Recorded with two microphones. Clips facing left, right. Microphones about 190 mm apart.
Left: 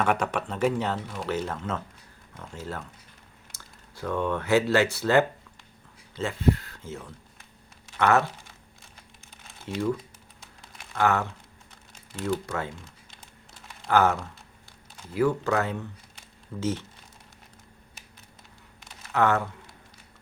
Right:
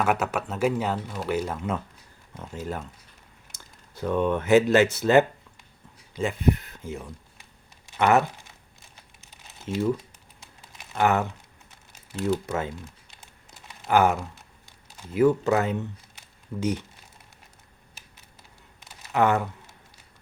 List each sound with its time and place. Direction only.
0.0 s speech: 5° right (ahead or behind)
9.7 s speech: 20° right (ahead or behind)
10.9 s speech: 15° right (ahead or behind)
13.8 s speech: 15° right (ahead or behind)
19.1 s speech: 15° right (ahead or behind)